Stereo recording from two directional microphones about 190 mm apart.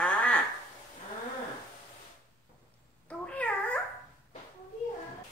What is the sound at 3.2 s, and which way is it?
Babbling, 5° left (ahead or behind).